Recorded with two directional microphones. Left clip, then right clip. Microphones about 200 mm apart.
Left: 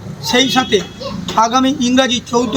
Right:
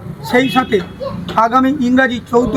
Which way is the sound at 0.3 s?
5° right (ahead or behind).